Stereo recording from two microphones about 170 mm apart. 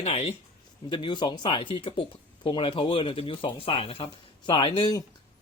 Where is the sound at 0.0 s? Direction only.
35° left (ahead or behind).